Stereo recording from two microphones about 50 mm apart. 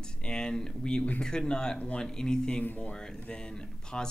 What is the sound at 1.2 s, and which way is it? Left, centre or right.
Speech, centre.